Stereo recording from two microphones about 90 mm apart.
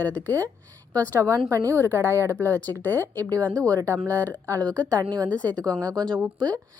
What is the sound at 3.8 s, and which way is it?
Speech, 35° right (ahead or behind).